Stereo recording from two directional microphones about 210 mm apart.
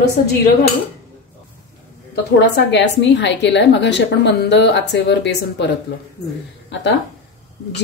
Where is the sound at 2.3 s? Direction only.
55° left (ahead or behind).